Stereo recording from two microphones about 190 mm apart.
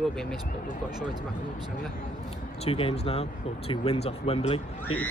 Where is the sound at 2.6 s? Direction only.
30° left (ahead or behind).